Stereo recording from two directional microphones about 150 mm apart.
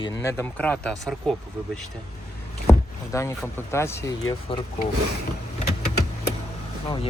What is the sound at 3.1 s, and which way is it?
Speech, 20° left (ahead or behind).